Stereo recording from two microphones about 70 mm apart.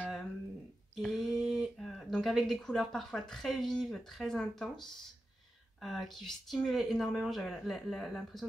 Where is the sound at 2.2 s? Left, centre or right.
Centre.